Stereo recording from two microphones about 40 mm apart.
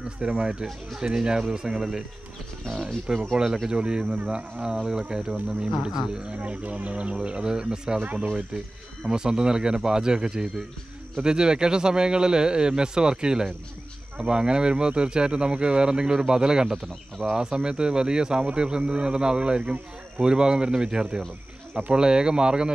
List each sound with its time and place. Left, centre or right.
0.2 s speech: right
0.7 s speech: centre
1.0 s speech: centre
3.1 s speech: right
5.3 s speech: right
5.8 s speech: centre
6.3 s speech: right
7.4 s speech: centre
8.0 s speech: right
9.0 s speech: centre